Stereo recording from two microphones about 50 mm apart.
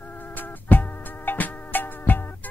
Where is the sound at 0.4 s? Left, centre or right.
Left.